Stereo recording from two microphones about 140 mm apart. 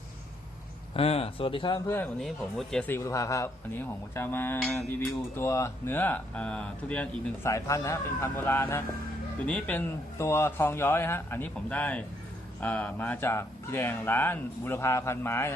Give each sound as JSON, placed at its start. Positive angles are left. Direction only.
{"t": 0.9, "sound": "speech", "side_deg": 45}
{"t": 2.2, "sound": "speech", "side_deg": 0}
{"t": 2.8, "sound": "speech", "side_deg": 20}
{"t": 4.9, "sound": "speech", "side_deg": 20}
{"t": 7.4, "sound": "speech", "side_deg": 20}